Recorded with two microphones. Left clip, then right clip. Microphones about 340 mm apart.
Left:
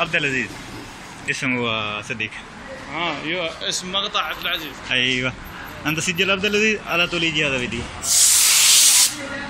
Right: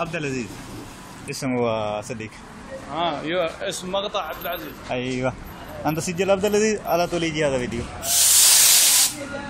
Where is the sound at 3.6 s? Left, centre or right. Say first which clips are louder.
Left 2 dB; right.